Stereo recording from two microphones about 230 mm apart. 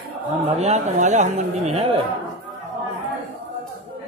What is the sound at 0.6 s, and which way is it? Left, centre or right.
Speech, right.